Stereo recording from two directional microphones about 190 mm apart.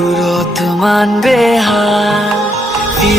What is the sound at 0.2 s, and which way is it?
Music, centre (ahead or behind).